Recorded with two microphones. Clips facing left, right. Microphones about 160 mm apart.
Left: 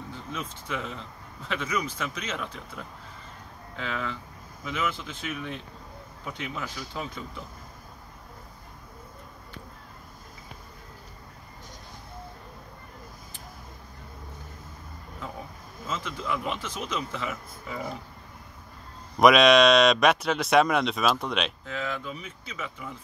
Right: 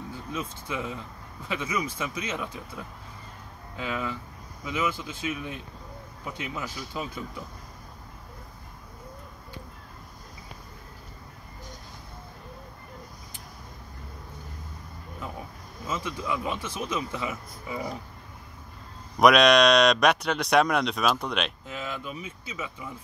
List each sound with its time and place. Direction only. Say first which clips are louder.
0.1 s speech: right 2 dB; 10° right (ahead or behind)
15.9 s speech: right 1 dB; 10° right (ahead or behind)
19.1 s speech: left 1 dB; centre (ahead or behind)
21.6 s speech: left 2 dB; 15° right (ahead or behind)